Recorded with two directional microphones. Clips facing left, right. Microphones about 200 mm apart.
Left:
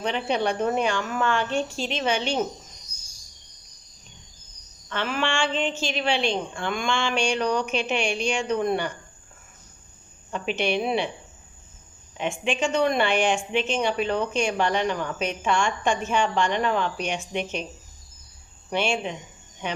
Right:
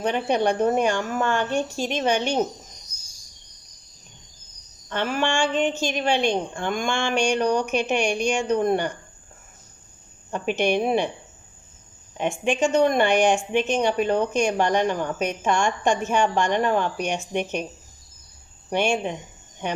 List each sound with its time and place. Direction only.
0.0 s a woman's voice: 45° right (ahead or behind)
4.9 s a woman's voice: 45° right (ahead or behind)
10.3 s a woman's voice: 45° right (ahead or behind)
12.1 s a woman's voice: 50° right (ahead or behind)